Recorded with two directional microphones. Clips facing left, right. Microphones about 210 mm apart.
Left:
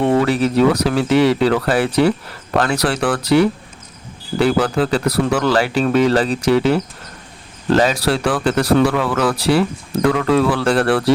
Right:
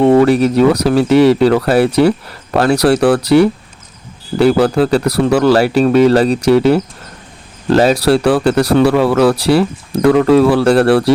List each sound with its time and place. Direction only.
0.2 s speech: 45° right (ahead or behind)
4.4 s speech: 40° right (ahead or behind)